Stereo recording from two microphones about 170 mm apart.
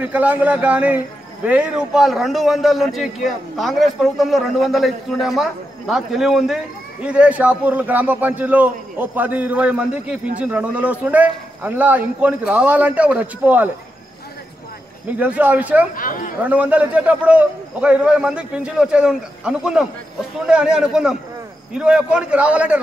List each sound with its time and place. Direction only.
0.0 s a man's voice: 10° right (ahead or behind)
15.0 s a man's voice: 10° right (ahead or behind)
15.9 s speech: 55° left (ahead or behind)
16.4 s a man's voice: 10° right (ahead or behind)